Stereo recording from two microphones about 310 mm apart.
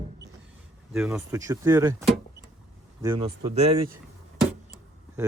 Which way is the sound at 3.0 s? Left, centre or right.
Centre.